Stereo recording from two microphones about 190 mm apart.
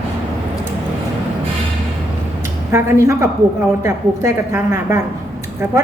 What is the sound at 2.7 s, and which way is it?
A woman's voice, 15° right (ahead or behind).